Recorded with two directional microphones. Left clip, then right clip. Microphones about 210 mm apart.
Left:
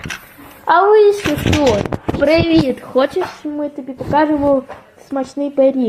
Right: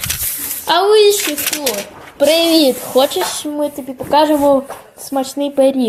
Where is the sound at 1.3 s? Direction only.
55° right (ahead or behind).